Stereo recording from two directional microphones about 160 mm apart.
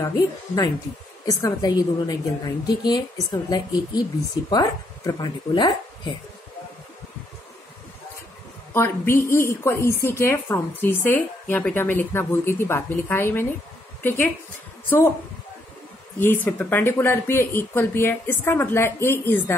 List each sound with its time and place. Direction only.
0.0 s a woman's voice: 20° left (ahead or behind)
8.7 s speech: 15° left (ahead or behind)
16.2 s speech: 10° left (ahead or behind)